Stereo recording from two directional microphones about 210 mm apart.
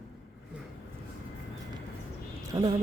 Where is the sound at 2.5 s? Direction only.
20° right (ahead or behind).